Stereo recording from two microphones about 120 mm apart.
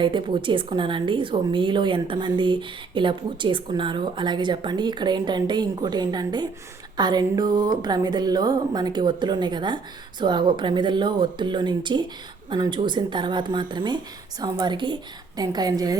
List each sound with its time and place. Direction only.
0.0 s a woman's voice: 45° right (ahead or behind)